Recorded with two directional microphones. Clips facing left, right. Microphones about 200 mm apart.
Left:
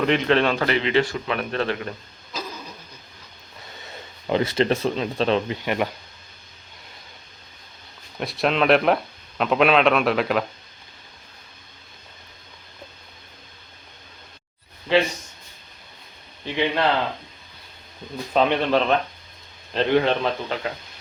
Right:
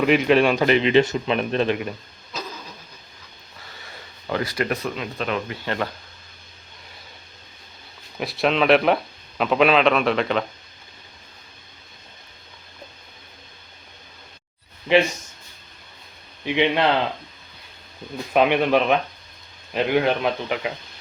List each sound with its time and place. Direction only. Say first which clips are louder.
0.0 s speech: right 3 dB; 10° right (ahead or behind)
3.8 s speech: left 4 dB; 20° left (ahead or behind)
5.6 s speech: left 2 dB; 15° left (ahead or behind)
8.2 s a man's voice: right 1 dB; centre (ahead or behind)
16.5 s speech: right 3 dB; 20° right (ahead or behind)
18.3 s speech: right 2 dB; 10° right (ahead or behind)